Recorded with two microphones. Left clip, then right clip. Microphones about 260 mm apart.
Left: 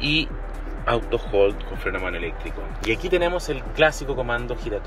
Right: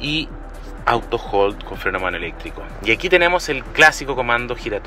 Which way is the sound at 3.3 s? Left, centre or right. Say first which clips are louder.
Right 6 dB; centre.